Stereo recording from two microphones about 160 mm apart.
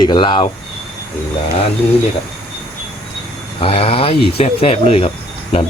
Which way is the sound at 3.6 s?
35° left (ahead or behind).